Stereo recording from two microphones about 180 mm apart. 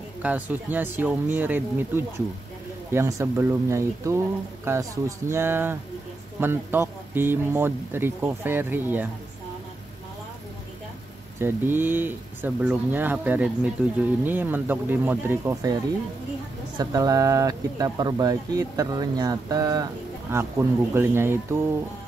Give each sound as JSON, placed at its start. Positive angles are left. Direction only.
{"t": 0.2, "sound": "speech", "side_deg": -10}
{"t": 11.3, "sound": "speech", "side_deg": -10}